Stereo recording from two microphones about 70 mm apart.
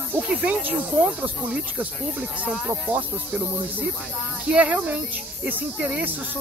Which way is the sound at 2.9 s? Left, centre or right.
Right.